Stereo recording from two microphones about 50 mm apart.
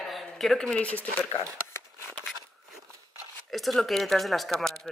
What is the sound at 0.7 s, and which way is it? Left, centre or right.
Speech, left.